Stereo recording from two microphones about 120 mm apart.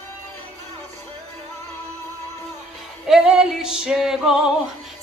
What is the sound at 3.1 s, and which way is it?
Music, 5° right (ahead or behind).